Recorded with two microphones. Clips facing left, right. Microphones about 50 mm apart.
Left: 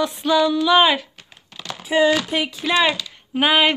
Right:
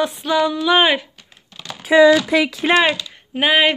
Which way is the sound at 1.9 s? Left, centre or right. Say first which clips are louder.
Right 6 dB; right.